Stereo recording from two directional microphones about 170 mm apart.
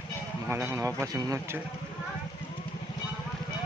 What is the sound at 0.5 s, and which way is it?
Speech, 15° right (ahead or behind).